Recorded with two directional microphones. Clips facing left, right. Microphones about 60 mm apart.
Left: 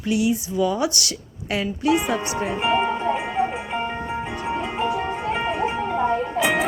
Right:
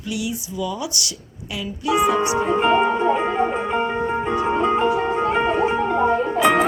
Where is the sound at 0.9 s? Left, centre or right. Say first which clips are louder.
Left 1 dB; left.